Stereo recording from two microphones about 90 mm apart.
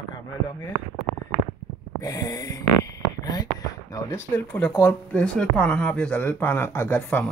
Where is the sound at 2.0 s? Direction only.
40° left (ahead or behind).